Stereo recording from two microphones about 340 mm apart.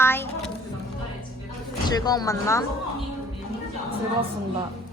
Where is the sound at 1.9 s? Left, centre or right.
Centre.